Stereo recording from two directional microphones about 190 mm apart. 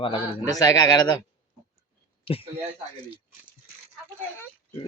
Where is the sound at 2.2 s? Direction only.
30° left (ahead or behind).